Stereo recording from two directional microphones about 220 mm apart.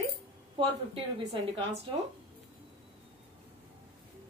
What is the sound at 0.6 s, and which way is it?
A woman's voice, 20° right (ahead or behind).